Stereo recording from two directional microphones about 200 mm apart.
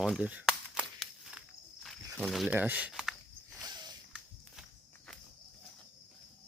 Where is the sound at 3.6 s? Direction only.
20° right (ahead or behind).